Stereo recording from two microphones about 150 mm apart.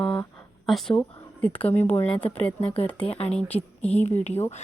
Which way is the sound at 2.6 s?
40° left (ahead or behind).